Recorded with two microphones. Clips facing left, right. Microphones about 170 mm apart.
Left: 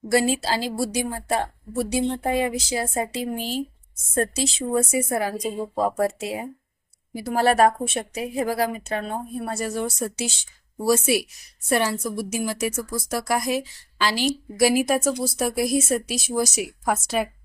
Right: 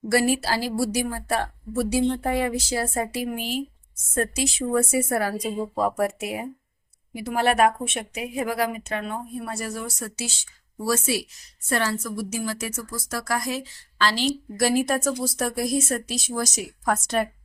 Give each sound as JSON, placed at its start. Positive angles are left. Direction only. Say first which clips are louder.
{"t": 0.1, "sound": "a woman's voice", "louder": "left 1 dB", "side_deg": 20}
{"t": 7.1, "sound": "a woman's voice", "louder": "left 2 dB", "side_deg": 35}